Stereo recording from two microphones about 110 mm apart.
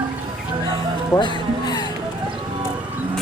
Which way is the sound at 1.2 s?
45° left (ahead or behind).